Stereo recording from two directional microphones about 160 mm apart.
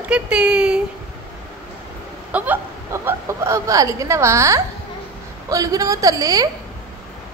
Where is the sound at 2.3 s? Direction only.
10° right (ahead or behind).